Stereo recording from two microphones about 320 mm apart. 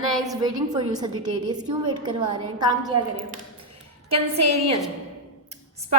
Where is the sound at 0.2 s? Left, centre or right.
Centre.